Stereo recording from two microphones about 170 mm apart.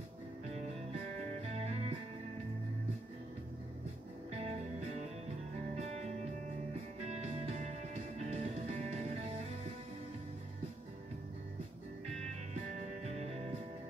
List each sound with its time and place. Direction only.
1.4 s music: 40° right (ahead or behind)
4.3 s music: 40° right (ahead or behind)
13.0 s music: 40° right (ahead or behind)